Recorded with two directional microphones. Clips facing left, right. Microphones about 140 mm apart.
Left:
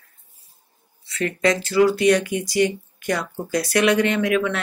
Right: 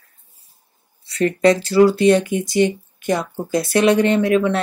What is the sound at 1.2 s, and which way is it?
Speech, 35° right (ahead or behind).